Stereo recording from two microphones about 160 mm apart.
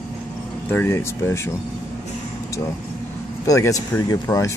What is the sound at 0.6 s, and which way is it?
Speech, 15° left (ahead or behind).